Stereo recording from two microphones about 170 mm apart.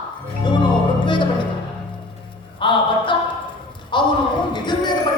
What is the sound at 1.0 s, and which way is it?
Music, 30° left (ahead or behind).